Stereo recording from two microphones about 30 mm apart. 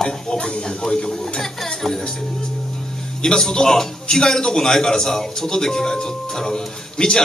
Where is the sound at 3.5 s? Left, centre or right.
Left.